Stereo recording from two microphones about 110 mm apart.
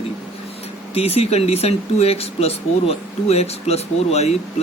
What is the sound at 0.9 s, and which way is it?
Speech, 65° left (ahead or behind).